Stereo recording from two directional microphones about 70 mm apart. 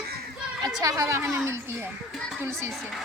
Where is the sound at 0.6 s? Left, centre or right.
Right.